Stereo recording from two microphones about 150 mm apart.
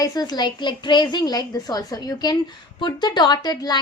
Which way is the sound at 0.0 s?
25° left (ahead or behind).